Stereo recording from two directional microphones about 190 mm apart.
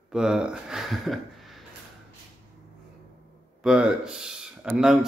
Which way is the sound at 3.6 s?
5° right (ahead or behind).